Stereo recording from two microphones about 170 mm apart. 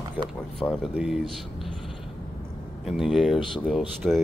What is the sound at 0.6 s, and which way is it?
Speech, 5° right (ahead or behind).